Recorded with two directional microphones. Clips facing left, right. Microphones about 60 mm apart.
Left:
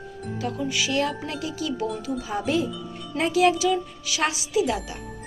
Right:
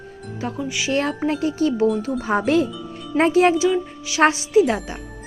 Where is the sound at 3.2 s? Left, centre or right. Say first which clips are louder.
Right 5 dB; right.